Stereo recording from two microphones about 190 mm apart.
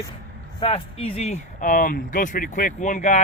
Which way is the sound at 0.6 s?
30° left (ahead or behind).